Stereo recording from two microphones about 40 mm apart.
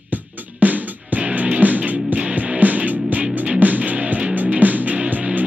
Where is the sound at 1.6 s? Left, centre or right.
Right.